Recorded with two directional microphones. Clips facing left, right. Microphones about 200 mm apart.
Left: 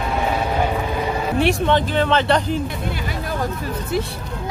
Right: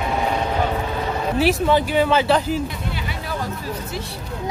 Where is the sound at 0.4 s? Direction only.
10° left (ahead or behind).